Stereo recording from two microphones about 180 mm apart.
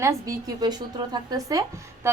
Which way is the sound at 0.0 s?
15° right (ahead or behind).